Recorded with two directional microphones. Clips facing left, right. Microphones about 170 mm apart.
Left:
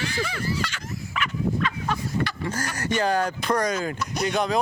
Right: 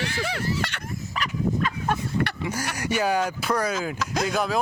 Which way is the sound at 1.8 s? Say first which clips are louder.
Right 1 dB; 50° right (ahead or behind).